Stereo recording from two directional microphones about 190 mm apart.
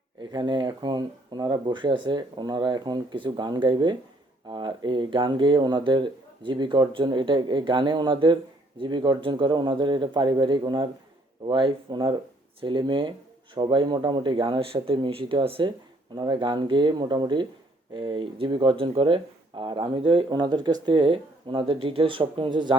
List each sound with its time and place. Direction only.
0.2 s speech: 25° right (ahead or behind)